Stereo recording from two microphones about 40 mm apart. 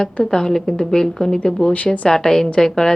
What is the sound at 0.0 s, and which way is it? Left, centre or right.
Speech, centre.